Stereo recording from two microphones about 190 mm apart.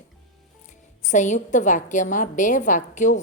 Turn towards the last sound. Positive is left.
turn(degrees=40)  # may be behind; listen again after turning